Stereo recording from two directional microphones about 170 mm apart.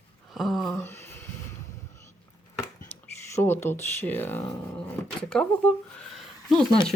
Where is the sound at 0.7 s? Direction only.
15° left (ahead or behind).